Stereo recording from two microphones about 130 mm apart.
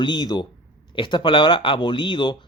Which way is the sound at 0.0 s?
35° left (ahead or behind).